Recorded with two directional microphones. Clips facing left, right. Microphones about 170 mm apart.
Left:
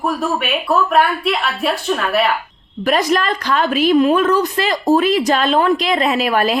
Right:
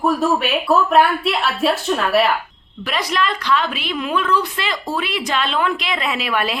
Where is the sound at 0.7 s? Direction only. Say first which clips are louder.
Even; centre (ahead or behind).